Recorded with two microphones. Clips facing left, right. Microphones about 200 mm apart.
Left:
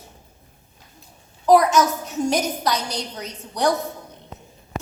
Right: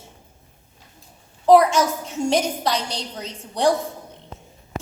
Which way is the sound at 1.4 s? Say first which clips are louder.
Right 1 dB; 30° right (ahead or behind).